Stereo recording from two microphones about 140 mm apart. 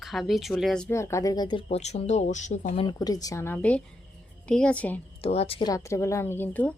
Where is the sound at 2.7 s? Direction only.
30° left (ahead or behind); by 4.9 s 10° left (ahead or behind).